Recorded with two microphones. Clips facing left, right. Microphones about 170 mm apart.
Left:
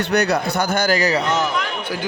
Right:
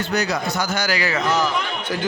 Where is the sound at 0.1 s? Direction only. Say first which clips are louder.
Left 5 dB; 65° left (ahead or behind); by 1.2 s 40° left (ahead or behind).